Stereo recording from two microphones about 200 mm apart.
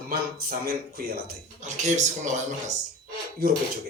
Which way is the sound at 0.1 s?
50° right (ahead or behind).